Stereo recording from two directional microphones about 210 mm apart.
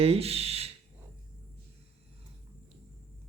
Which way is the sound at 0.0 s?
30° right (ahead or behind).